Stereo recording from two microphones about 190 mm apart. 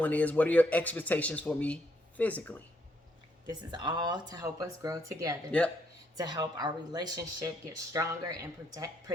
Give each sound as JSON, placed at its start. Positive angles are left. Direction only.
{"t": 0.0, "sound": "speech", "side_deg": 10}
{"t": 3.5, "sound": "speech", "side_deg": -20}
{"t": 5.5, "sound": "speech", "side_deg": 5}
{"t": 6.1, "sound": "speech", "side_deg": -20}